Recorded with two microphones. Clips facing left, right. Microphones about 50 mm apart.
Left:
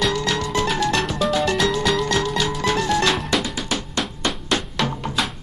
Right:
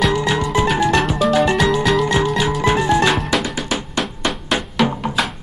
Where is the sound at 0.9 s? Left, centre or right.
Centre.